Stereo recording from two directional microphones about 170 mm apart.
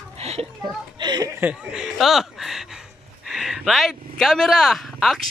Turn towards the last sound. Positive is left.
turn(degrees=0)  # may be behind; listen again after turning